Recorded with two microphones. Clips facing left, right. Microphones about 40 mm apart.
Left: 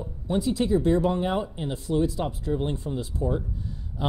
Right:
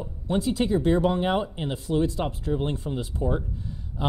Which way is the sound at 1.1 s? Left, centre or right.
Right.